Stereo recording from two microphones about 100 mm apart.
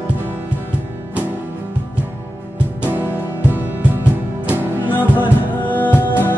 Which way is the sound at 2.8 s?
20° right (ahead or behind).